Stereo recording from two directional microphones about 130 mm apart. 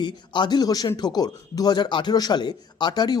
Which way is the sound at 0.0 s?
35° left (ahead or behind).